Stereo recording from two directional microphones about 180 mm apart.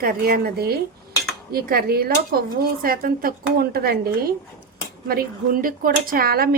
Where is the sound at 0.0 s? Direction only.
55° right (ahead or behind).